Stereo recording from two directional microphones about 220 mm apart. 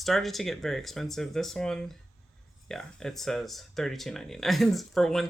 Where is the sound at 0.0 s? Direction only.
Centre (ahead or behind).